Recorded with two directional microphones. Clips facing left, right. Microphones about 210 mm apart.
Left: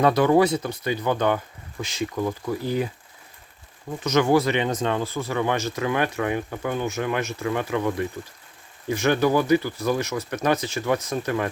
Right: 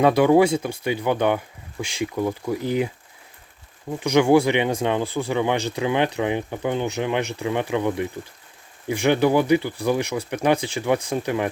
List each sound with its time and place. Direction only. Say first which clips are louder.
0.0 s speech: right 2 dB; 10° right (ahead or behind)
4.0 s speech: right 3 dB; 15° right (ahead or behind)